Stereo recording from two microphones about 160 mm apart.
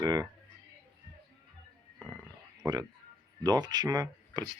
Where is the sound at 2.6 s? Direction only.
25° right (ahead or behind).